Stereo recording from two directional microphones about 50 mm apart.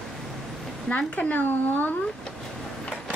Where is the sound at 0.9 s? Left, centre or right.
Left.